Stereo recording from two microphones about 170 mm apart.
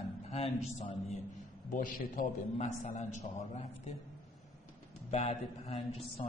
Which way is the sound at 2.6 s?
40° left (ahead or behind).